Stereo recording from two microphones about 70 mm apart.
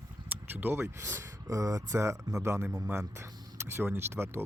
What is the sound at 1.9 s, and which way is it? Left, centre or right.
Speech, right.